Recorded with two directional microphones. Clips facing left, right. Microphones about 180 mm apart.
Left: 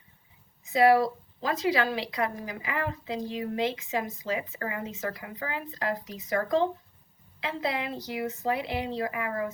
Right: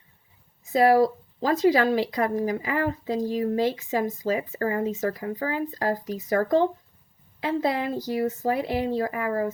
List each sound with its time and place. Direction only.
0.7 s a woman's voice: 40° right (ahead or behind)